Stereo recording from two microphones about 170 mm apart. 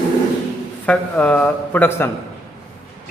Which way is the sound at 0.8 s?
5° left (ahead or behind).